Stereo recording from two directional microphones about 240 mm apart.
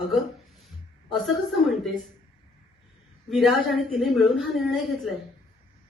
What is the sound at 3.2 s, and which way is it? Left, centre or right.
A woman's voice, centre.